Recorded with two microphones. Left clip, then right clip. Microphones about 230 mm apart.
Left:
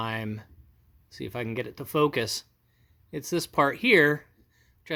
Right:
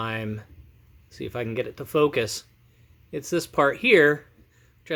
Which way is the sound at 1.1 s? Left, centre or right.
Left.